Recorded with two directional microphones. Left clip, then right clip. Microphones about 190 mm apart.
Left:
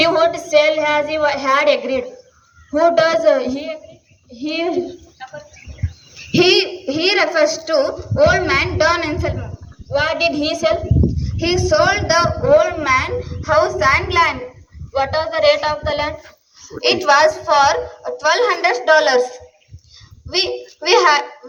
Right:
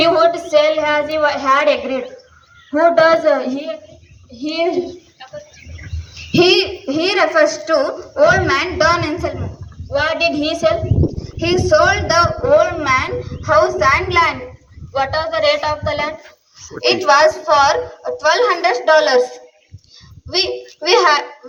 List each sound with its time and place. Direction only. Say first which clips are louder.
0.0 s a sound: right 2 dB; 25° left (ahead or behind)
0.4 s a child's voice: even; 25° left (ahead or behind)
4.3 s a woman's voice: right 2 dB; 10° left (ahead or behind)
6.3 s a child's voice: right 1 dB; 20° left (ahead or behind)
8.3 s a woman's voice: right 2 dB; 50° left (ahead or behind)
8.5 s a woman's voice: right 1 dB; 20° left (ahead or behind)
16.6 s a sound: right 1 dB; 5° left (ahead or behind)
16.8 s a child's voice: right 1 dB; 20° left (ahead or behind)